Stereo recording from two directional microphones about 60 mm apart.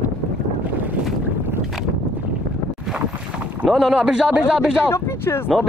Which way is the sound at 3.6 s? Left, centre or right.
Centre.